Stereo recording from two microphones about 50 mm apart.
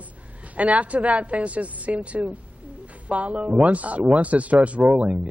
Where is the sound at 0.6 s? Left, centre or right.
Right.